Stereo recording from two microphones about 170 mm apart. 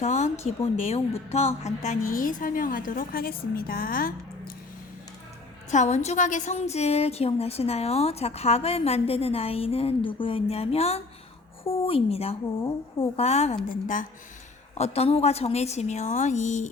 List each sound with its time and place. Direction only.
0.0 s a woman's voice: 45° left (ahead or behind)
5.7 s a woman's voice: 40° left (ahead or behind)